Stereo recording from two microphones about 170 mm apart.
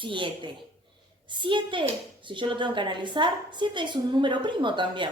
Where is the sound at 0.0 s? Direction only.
30° right (ahead or behind).